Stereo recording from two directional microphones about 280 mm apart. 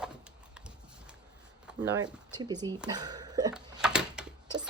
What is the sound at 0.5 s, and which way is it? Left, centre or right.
Clip-clop, centre.